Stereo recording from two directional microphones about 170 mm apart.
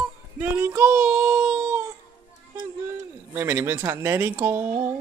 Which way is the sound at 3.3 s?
10° right (ahead or behind).